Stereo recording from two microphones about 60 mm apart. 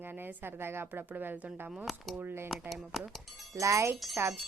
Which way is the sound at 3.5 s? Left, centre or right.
Right.